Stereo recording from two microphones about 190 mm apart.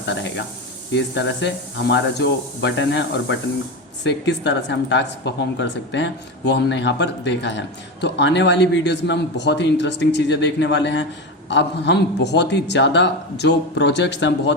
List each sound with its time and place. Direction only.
0.0 s a man's voice: 70° left (ahead or behind)